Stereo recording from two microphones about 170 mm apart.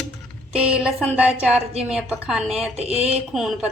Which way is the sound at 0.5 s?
5° right (ahead or behind).